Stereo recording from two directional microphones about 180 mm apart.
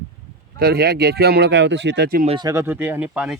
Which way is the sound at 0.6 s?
60° right (ahead or behind).